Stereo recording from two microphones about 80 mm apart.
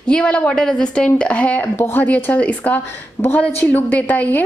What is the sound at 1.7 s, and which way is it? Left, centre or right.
Speech, left.